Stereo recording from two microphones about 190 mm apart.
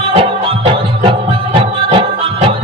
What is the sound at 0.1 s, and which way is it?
Music, 30° right (ahead or behind).